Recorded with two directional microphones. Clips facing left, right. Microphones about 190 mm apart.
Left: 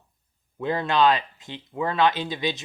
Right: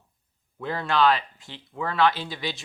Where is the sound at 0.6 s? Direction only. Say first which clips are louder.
Left 2 dB; 20° left (ahead or behind).